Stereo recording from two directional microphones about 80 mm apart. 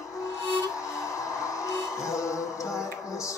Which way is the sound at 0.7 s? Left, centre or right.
Left.